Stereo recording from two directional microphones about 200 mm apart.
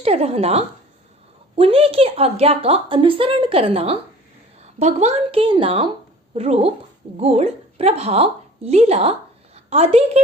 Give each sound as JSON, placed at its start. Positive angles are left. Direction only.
{"t": 0.0, "sound": "a woman's voice", "side_deg": -30}